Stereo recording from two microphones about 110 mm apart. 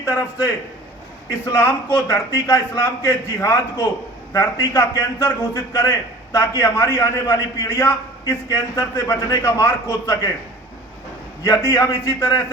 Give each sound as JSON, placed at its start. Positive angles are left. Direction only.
{"t": 0.1, "sound": "a man's voice", "side_deg": 30}
{"t": 1.5, "sound": "a man's voice", "side_deg": 20}
{"t": 11.4, "sound": "a man's voice", "side_deg": 30}